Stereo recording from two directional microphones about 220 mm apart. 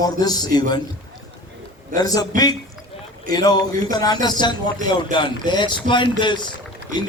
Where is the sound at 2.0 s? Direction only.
15° left (ahead or behind).